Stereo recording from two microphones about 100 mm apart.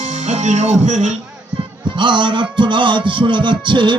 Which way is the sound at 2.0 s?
55° right (ahead or behind).